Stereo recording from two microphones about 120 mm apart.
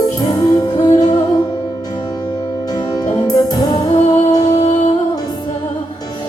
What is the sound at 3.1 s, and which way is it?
Music, 35° left (ahead or behind).